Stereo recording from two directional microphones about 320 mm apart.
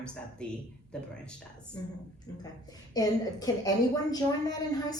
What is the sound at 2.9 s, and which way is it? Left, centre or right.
A woman's voice, centre.